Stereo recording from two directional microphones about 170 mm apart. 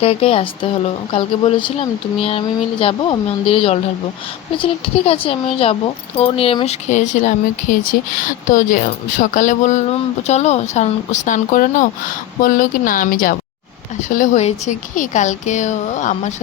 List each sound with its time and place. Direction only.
0.0 s speech: 35° left (ahead or behind)